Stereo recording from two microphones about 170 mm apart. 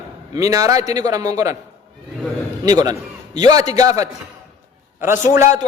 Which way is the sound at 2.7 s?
20° right (ahead or behind).